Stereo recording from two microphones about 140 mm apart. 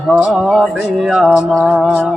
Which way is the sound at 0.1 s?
5° right (ahead or behind).